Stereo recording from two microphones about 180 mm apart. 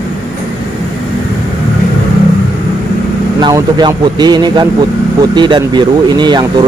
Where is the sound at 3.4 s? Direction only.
20° right (ahead or behind).